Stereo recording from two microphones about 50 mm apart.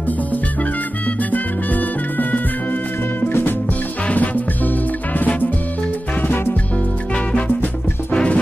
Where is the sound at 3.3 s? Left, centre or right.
Left.